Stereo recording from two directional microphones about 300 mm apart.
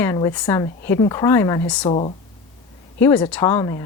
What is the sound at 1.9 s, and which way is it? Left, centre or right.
Speech, centre.